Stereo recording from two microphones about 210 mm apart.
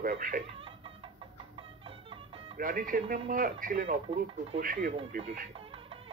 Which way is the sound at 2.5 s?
40° right (ahead or behind).